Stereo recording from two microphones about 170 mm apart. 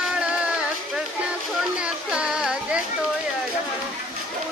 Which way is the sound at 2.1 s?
5° right (ahead or behind).